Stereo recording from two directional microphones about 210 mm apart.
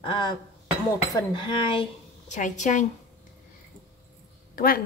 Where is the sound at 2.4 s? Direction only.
35° left (ahead or behind).